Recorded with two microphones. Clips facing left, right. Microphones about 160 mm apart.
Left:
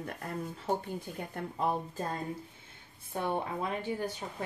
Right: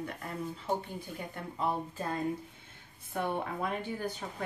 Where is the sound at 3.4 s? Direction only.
25° left (ahead or behind).